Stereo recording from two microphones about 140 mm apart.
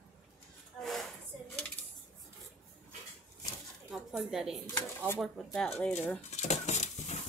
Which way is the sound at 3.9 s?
Centre (ahead or behind).